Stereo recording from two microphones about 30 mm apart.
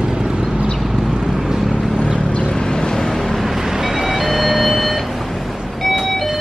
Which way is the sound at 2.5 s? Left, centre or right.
Left.